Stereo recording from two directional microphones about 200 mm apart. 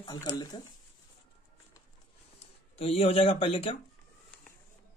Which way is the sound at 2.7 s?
30° left (ahead or behind).